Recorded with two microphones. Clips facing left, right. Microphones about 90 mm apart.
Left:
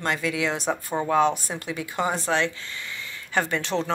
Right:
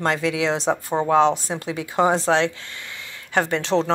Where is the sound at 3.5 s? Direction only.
90° right.